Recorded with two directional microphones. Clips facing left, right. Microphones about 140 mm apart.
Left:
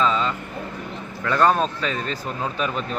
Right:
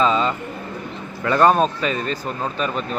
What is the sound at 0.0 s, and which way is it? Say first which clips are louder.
Bird: right 3 dB; 15° right (ahead or behind).